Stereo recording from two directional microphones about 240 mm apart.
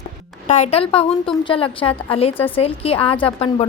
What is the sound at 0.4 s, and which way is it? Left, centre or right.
Speech, left.